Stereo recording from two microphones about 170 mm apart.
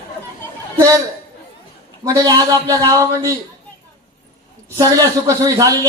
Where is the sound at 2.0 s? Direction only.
20° right (ahead or behind).